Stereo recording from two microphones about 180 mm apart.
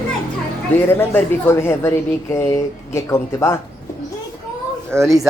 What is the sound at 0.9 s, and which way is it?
Speech, 10° left (ahead or behind).